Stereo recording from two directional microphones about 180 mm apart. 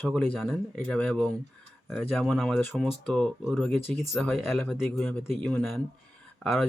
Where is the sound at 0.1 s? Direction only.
Centre (ahead or behind).